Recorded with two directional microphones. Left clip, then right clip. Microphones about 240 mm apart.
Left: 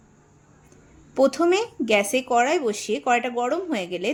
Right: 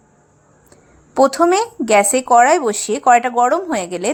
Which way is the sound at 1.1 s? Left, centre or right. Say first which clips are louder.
Right 7 dB; centre.